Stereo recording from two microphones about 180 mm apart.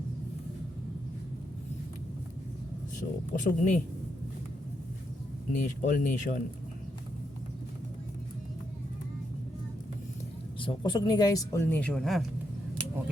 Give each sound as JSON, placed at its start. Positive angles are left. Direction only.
{"t": 3.0, "sound": "speech", "side_deg": 55}
{"t": 3.3, "sound": "speech", "side_deg": 45}
{"t": 5.5, "sound": "speech", "side_deg": 45}
{"t": 10.6, "sound": "speech", "side_deg": 25}